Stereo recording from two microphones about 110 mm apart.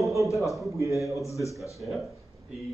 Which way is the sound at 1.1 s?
30° left (ahead or behind).